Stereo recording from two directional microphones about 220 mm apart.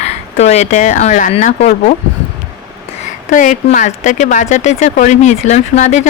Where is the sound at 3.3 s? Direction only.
35° left (ahead or behind).